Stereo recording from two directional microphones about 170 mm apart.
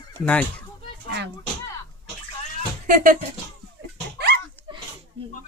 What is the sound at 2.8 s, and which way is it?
Speech, 55° right (ahead or behind).